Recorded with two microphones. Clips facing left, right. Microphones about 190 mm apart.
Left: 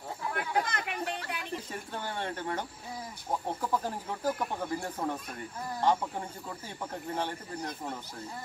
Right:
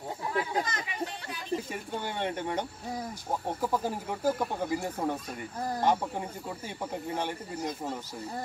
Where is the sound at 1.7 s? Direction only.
15° right (ahead or behind).